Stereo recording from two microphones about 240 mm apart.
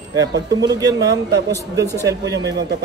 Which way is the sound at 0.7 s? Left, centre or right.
Centre.